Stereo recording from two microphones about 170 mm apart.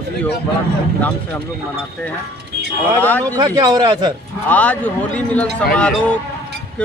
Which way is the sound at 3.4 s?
25° right (ahead or behind).